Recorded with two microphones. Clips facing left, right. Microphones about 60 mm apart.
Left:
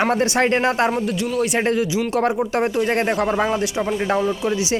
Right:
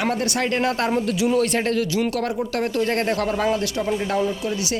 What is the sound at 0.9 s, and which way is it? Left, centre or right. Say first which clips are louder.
Speech: right 2 dB; centre.